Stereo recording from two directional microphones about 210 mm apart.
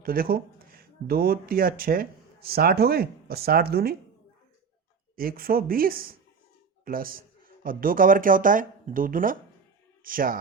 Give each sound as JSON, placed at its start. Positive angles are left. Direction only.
{"t": 0.0, "sound": "speech", "side_deg": -45}
{"t": 5.1, "sound": "speech", "side_deg": -45}